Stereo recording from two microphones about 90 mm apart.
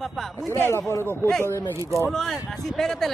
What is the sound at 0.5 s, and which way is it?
Speech, 25° left (ahead or behind).